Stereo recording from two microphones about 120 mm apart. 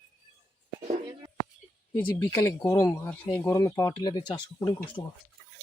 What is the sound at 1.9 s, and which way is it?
Speech, 15° left (ahead or behind).